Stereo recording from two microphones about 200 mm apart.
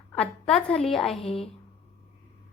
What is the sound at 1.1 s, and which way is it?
Speech, 30° left (ahead or behind).